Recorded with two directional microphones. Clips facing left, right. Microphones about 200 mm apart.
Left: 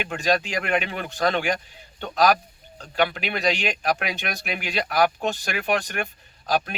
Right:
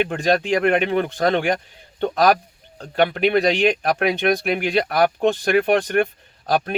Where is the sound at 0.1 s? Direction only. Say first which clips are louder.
Right 5 dB; 55° right (ahead or behind).